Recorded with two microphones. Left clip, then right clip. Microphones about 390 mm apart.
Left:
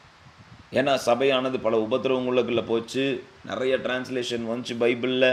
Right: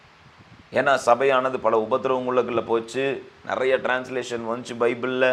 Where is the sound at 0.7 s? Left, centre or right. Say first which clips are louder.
Right 3 dB; right.